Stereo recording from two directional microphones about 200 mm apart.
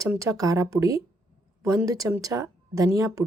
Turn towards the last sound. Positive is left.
turn(degrees=-15)  # may be behind; listen again after turning